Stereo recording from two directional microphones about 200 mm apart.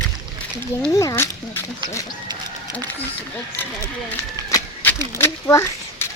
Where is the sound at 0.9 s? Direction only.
15° left (ahead or behind).